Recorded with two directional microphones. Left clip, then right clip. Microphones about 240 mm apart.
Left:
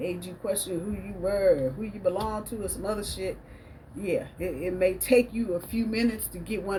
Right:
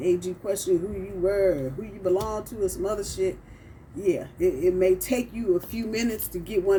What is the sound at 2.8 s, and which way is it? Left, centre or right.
Speech, centre.